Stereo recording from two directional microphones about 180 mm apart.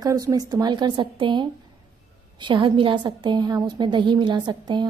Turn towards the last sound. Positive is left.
turn(degrees=-25)  # may be behind; listen again after turning